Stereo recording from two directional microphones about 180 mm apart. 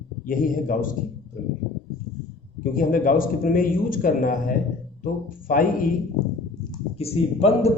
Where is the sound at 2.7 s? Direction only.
50° left (ahead or behind).